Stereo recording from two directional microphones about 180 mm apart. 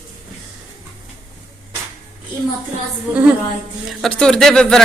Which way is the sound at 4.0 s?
5° left (ahead or behind).